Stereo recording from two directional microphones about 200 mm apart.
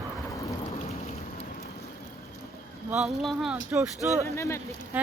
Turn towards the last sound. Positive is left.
turn(degrees=-10)  # may be behind; listen again after turning